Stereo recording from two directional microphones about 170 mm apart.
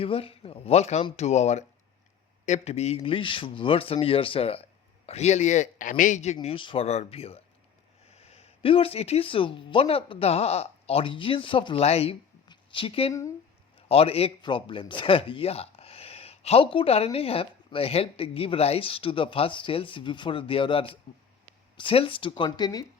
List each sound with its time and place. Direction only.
0.0 s speech: 35° left (ahead or behind)